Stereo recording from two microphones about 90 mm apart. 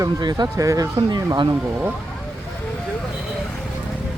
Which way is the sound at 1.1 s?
55° right (ahead or behind).